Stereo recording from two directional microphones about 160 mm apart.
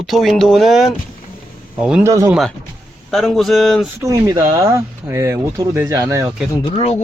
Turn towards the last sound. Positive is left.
turn(degrees=40)  # may be behind; listen again after turning